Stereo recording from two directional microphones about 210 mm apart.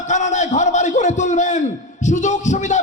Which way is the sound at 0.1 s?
35° left (ahead or behind).